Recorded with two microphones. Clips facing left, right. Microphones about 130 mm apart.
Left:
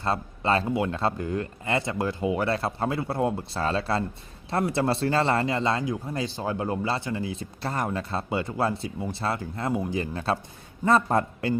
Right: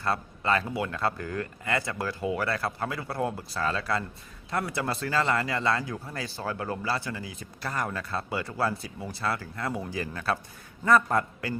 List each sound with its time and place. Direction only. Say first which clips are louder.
0.0 s speech: left 2 dB; 25° left (ahead or behind)